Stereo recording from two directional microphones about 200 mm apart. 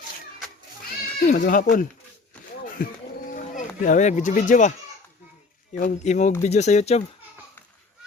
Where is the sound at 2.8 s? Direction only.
45° left (ahead or behind).